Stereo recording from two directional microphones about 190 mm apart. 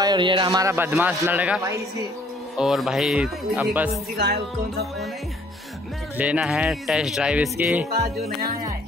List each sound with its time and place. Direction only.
0.0 s a man's voice: 25° right (ahead or behind); by 4.0 s 5° right (ahead or behind)
4.2 s music: 55° right (ahead or behind)
6.1 s speech: 5° right (ahead or behind)